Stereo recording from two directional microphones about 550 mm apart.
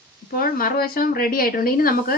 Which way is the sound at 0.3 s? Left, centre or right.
Centre.